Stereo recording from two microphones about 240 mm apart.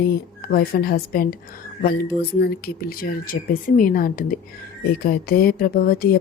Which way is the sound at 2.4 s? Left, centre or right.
Left.